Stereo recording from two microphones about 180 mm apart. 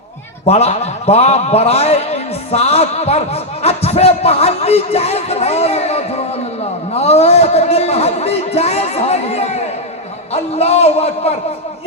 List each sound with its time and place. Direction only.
0.4 s a man's voice: 35° left (ahead or behind)
6.9 s a sound: 35° left (ahead or behind)
10.3 s a man's voice: 35° left (ahead or behind)